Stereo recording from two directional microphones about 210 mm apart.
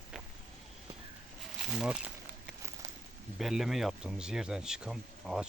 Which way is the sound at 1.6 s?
5° right (ahead or behind).